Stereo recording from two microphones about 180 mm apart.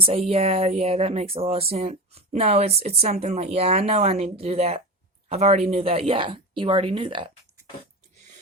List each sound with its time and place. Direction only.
0.0 s a woman's voice: 35° right (ahead or behind)